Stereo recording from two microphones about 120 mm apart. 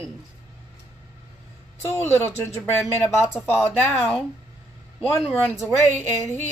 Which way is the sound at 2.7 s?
Centre (ahead or behind).